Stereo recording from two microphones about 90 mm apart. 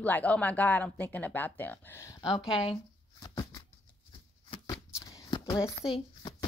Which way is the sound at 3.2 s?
65° left (ahead or behind).